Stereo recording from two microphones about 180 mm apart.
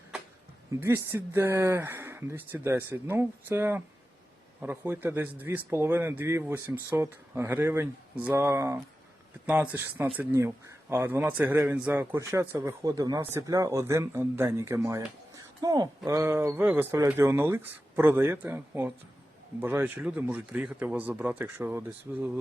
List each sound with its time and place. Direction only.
0.8 s speech: 15° right (ahead or behind)